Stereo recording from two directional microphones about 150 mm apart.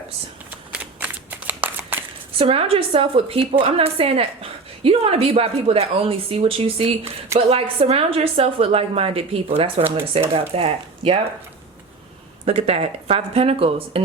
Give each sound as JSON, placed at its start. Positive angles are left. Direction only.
{"t": 0.7, "sound": "shuffling cards", "side_deg": -10}
{"t": 2.4, "sound": "a woman's voice", "side_deg": -40}
{"t": 12.5, "sound": "speech", "side_deg": -45}